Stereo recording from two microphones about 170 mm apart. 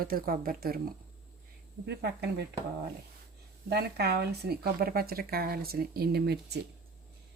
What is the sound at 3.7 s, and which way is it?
Speech, 70° right (ahead or behind).